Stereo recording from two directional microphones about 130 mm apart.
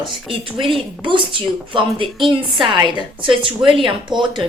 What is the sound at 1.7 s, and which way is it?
Speech, 40° right (ahead or behind).